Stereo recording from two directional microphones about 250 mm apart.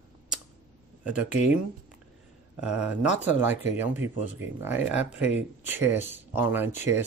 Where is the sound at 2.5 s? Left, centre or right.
Centre.